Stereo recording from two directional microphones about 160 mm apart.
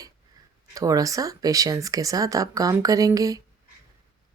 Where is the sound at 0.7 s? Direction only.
20° right (ahead or behind).